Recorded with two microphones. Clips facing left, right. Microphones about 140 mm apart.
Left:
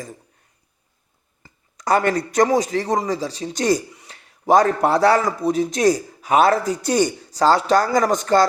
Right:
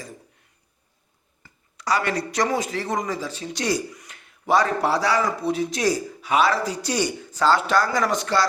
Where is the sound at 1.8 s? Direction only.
50° left (ahead or behind).